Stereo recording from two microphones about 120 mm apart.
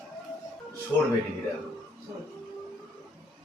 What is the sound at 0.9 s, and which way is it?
Speech, 10° left (ahead or behind).